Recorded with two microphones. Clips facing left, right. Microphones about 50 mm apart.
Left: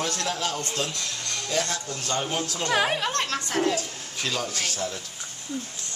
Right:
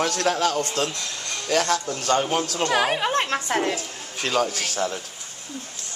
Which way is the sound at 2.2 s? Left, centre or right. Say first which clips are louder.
Right 5 dB; right.